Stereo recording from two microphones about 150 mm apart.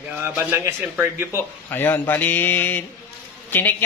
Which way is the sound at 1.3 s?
15° left (ahead or behind).